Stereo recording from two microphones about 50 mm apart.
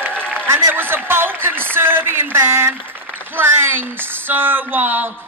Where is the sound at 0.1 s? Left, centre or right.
Left.